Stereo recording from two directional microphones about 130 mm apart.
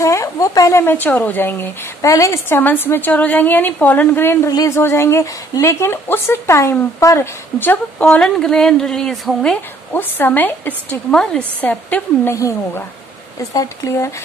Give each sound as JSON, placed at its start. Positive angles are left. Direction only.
{"t": 0.0, "sound": "speech", "side_deg": 25}
{"t": 8.0, "sound": "speech", "side_deg": 5}
{"t": 12.4, "sound": "speech", "side_deg": 25}